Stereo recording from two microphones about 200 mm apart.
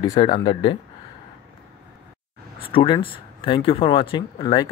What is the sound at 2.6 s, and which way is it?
Speech, 25° left (ahead or behind).